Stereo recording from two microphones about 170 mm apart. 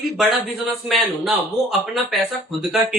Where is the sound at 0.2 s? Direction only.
Centre (ahead or behind).